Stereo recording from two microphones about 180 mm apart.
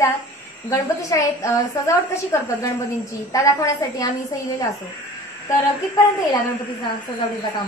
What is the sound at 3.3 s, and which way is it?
Speech, 15° left (ahead or behind).